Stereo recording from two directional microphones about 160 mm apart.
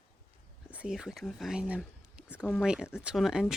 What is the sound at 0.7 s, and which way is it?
Speech, 5° right (ahead or behind).